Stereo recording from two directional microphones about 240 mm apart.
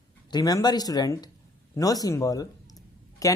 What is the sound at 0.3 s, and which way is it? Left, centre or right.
Speech, centre.